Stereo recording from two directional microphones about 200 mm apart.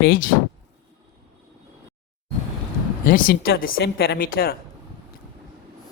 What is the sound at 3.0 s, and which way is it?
A woman's voice, 45° left (ahead or behind).